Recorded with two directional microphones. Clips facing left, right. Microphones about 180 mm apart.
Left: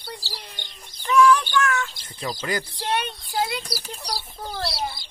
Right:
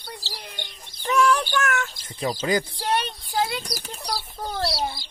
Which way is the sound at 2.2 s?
25° right (ahead or behind).